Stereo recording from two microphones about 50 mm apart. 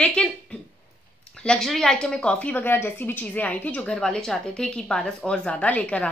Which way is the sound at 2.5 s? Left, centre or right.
Left.